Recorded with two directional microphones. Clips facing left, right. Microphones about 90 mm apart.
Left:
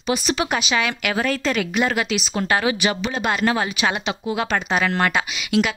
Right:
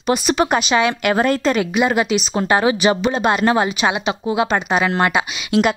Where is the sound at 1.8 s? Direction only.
20° right (ahead or behind).